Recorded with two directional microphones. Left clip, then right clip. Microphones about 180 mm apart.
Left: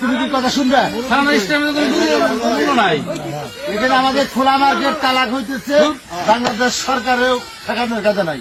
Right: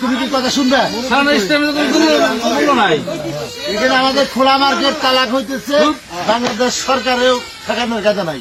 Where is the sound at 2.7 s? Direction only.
40° left (ahead or behind).